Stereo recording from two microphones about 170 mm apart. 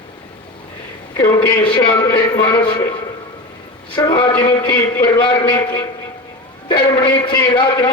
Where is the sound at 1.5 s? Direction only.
10° left (ahead or behind).